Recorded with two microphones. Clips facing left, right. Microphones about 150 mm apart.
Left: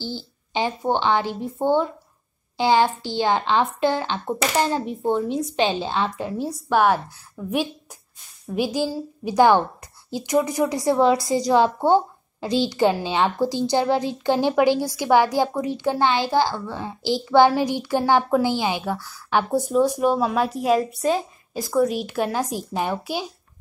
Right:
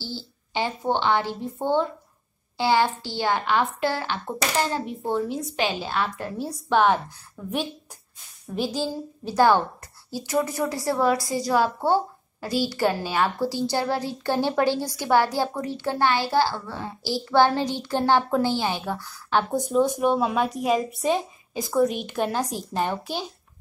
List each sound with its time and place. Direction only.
0.0 s a child's voice: 15° left (ahead or behind)